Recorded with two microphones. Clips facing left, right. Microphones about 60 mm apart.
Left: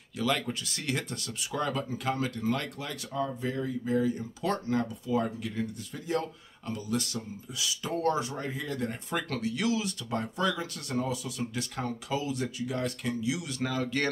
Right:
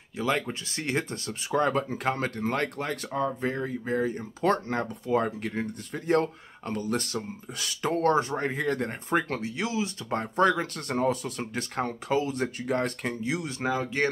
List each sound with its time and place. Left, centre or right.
0.2 s speech: right
9.3 s speech: right
10.0 s speech: right